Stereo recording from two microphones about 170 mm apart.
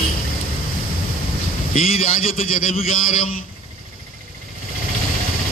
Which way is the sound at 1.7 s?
55° left (ahead or behind).